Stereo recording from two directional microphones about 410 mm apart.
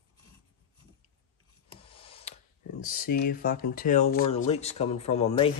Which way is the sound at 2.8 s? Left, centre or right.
Left.